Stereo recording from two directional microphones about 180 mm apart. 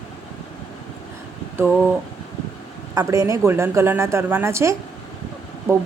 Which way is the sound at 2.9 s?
15° right (ahead or behind).